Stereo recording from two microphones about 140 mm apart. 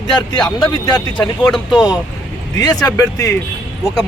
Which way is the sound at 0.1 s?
30° left (ahead or behind).